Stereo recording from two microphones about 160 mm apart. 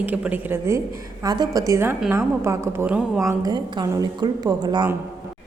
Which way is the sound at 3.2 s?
20° right (ahead or behind).